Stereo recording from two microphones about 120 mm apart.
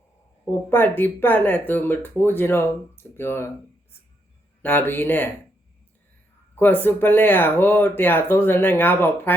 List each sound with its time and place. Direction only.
0.7 s speech: 15° left (ahead or behind)
4.6 s speech: 15° left (ahead or behind)
6.6 s speech: 15° left (ahead or behind)